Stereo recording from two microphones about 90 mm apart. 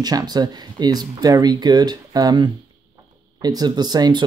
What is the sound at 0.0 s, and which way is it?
Speech, 50° right (ahead or behind).